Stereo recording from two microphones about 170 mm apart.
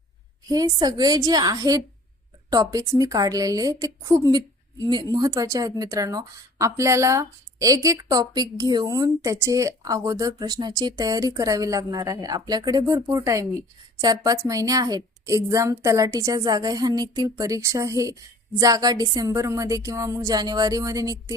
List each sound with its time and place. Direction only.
0.4 s a woman's voice: 20° right (ahead or behind)